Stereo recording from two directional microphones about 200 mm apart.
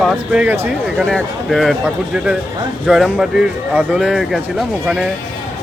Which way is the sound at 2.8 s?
5° right (ahead or behind).